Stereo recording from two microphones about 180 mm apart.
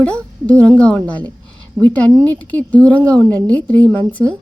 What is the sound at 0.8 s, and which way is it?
A woman's voice, 5° left (ahead or behind).